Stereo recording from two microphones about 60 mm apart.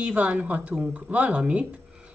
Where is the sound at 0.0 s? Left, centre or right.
Right.